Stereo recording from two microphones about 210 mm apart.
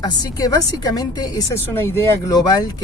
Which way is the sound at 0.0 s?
20° left (ahead or behind).